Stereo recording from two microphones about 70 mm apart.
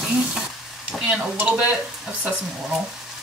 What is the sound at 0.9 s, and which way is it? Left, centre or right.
Speech, centre.